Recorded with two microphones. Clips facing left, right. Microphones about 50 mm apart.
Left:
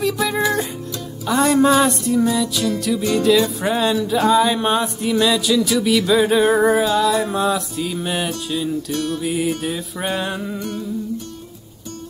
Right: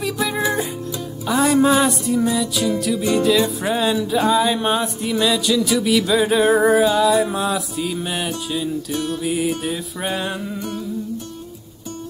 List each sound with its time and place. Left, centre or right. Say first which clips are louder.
0.0 s music: left 2 dB; centre
8.9 s music: even; centre
9.2 s music: even; centre